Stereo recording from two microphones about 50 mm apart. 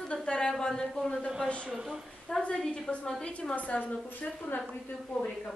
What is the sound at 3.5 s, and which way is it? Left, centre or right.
A woman's voice, left.